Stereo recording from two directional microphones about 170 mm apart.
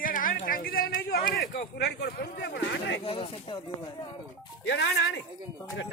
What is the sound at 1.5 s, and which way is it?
Speech, 70° left (ahead or behind).